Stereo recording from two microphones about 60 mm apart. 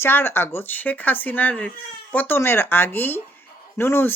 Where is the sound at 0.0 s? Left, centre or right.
Left.